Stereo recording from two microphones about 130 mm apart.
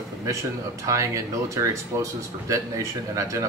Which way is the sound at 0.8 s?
25° right (ahead or behind).